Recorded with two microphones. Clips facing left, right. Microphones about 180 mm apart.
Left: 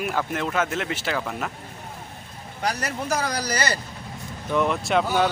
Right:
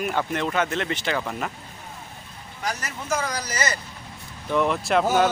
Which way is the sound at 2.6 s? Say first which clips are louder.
Left 3 dB; 35° left (ahead or behind).